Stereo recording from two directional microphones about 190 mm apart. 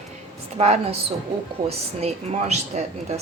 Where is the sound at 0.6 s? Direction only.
35° right (ahead or behind).